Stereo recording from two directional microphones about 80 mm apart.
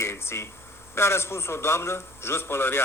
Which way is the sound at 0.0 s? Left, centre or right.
Left.